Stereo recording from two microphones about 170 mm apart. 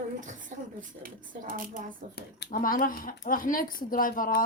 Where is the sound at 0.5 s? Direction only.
45° right (ahead or behind).